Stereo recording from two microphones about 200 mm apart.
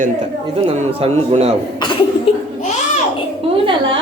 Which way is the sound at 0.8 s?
30° right (ahead or behind).